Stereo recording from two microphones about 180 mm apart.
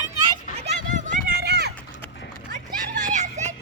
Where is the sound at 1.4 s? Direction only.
65° right (ahead or behind).